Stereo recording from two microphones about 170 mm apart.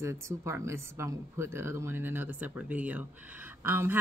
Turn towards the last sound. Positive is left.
turn(degrees=-10)  # may be behind; listen again after turning